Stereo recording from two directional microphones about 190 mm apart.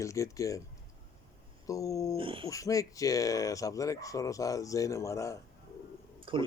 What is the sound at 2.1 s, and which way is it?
Speech, 25° right (ahead or behind).